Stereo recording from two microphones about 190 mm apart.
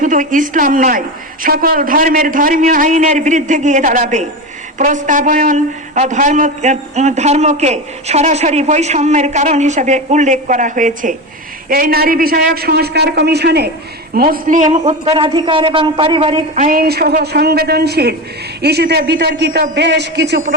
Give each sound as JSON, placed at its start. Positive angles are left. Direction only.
{"t": 0.0, "sound": "a woman's voice", "side_deg": -45}
{"t": 14.1, "sound": "a man's voice", "side_deg": -50}
{"t": 16.6, "sound": "a man's voice", "side_deg": -50}